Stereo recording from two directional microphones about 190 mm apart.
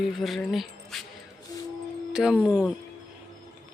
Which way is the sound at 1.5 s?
20° left (ahead or behind).